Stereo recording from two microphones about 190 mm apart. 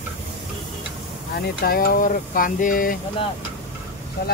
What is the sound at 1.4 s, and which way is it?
Speech, 50° left (ahead or behind).